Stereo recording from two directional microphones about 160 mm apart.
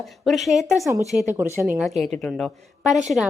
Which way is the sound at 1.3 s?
15° right (ahead or behind).